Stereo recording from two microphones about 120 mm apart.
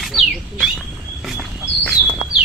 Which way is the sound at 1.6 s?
15° left (ahead or behind).